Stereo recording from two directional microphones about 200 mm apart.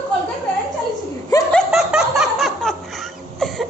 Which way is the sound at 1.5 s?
Centre (ahead or behind).